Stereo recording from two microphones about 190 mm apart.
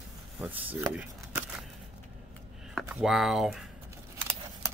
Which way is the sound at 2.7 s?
Centre (ahead or behind).